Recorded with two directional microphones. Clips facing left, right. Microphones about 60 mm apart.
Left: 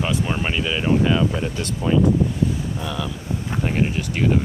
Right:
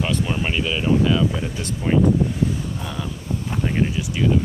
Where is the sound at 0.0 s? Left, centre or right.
Centre.